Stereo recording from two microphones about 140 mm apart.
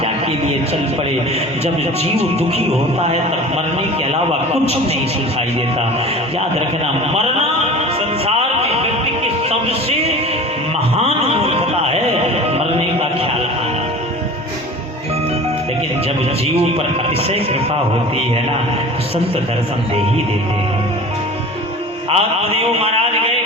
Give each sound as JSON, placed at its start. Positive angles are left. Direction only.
{"t": 8.4, "sound": "music", "side_deg": -50}
{"t": 11.0, "sound": "a sound", "side_deg": -45}
{"t": 12.5, "sound": "music", "side_deg": -45}
{"t": 17.2, "sound": "speech", "side_deg": -45}
{"t": 22.1, "sound": "mantra", "side_deg": -45}